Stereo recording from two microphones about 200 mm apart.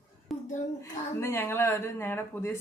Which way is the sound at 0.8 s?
10° left (ahead or behind).